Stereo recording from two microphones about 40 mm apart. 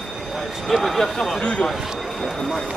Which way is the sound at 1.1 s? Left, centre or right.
Centre.